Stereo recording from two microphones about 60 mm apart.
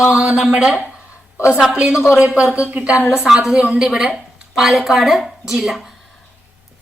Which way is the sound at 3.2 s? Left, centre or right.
Centre.